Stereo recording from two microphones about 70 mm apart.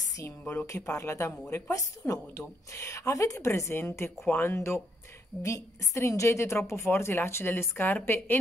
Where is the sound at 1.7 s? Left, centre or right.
Left.